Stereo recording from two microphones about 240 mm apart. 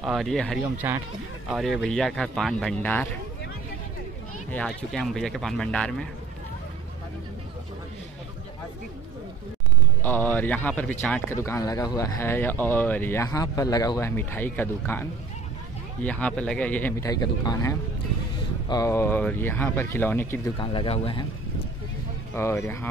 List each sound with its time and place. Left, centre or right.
0.0 s speech: centre
4.5 s speech: centre
10.0 s speech: centre
20.5 s speech: left
22.3 s speech: centre